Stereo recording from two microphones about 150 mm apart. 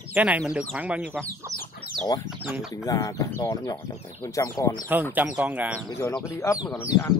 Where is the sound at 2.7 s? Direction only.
20° left (ahead or behind).